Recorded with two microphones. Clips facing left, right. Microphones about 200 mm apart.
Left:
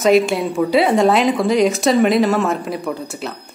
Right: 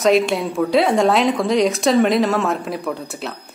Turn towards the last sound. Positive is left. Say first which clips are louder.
# left 1 dB
turn(degrees=0)  # may be behind; listen again after turning